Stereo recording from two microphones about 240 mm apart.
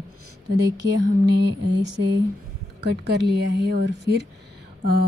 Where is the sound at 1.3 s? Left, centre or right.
Right.